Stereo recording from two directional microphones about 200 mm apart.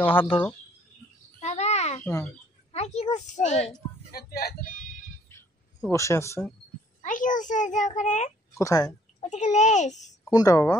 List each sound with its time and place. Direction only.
0.0 s speech: 25° left (ahead or behind)
1.4 s a sound: 35° left (ahead or behind)
2.7 s a child's voice: 30° left (ahead or behind)
4.1 s speech: 50° left (ahead or behind)
5.3 s a sound: 15° left (ahead or behind)
7.0 s a child's voice: 40° left (ahead or behind)
8.5 s a woman's voice: 15° left (ahead or behind)
9.3 s a child's voice: 35° left (ahead or behind)
10.3 s a woman's voice: 15° left (ahead or behind)